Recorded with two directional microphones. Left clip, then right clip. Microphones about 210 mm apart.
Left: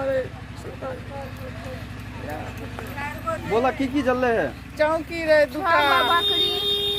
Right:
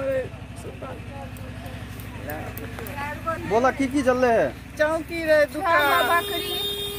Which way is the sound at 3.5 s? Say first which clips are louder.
Right 1 dB; 45° right (ahead or behind).